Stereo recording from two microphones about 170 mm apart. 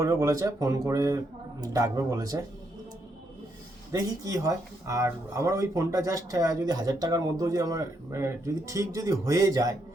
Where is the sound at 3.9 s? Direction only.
20° right (ahead or behind).